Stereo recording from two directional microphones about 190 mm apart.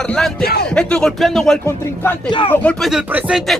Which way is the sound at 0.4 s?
55° left (ahead or behind).